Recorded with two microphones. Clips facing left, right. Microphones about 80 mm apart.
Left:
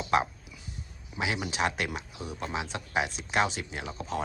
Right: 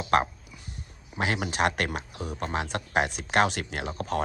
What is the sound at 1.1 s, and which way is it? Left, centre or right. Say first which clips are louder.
Speech: right 3 dB; right.